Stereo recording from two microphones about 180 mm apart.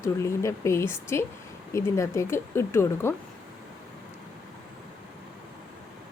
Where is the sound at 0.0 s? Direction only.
15° left (ahead or behind).